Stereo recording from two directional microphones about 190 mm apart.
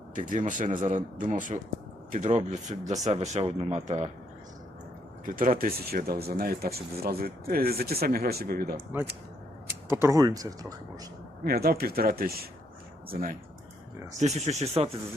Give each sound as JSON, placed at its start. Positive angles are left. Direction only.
{"t": 0.1, "sound": "speech", "side_deg": -45}
{"t": 5.2, "sound": "speech", "side_deg": -45}
{"t": 9.9, "sound": "speech", "side_deg": -15}
{"t": 11.4, "sound": "speech", "side_deg": -55}
{"t": 14.2, "sound": "speech", "side_deg": -35}